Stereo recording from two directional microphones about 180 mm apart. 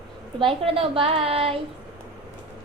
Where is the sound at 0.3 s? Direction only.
30° right (ahead or behind).